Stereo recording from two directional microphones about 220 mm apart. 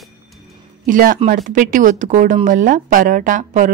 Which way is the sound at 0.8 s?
40° right (ahead or behind).